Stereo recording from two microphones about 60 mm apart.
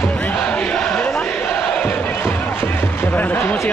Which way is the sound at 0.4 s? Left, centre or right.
Centre.